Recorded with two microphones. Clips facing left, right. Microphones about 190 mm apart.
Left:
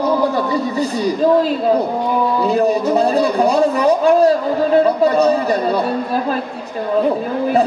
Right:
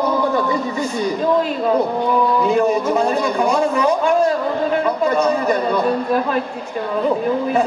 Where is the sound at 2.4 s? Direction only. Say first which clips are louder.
Left 1 dB; 35° left (ahead or behind).